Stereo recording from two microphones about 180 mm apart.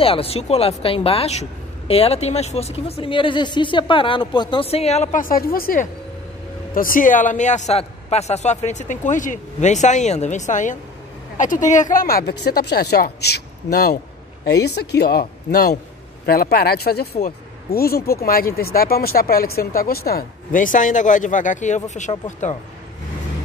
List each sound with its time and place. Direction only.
0.0 s speech: 30° left (ahead or behind)